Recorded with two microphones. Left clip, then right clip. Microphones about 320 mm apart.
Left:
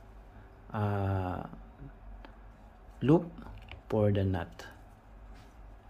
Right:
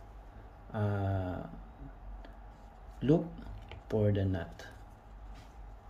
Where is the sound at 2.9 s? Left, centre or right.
Centre.